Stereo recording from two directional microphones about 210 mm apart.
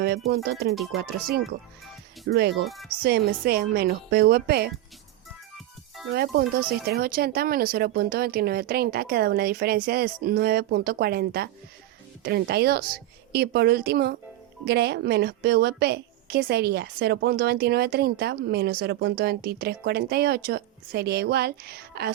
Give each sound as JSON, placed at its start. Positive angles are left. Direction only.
{"t": 0.3, "sound": "a woman's voice", "side_deg": -50}
{"t": 6.1, "sound": "a woman's voice", "side_deg": -45}